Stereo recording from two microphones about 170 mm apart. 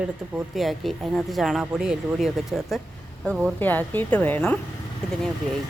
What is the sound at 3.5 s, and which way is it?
A woman's voice, 10° left (ahead or behind).